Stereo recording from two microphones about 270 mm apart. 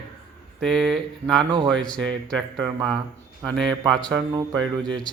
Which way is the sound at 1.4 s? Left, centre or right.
Centre.